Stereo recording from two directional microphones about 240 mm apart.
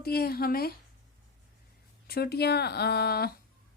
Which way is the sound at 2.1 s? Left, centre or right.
Left.